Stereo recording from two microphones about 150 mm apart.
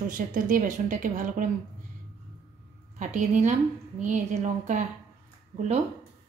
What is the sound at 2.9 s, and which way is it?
A woman's voice, 55° right (ahead or behind).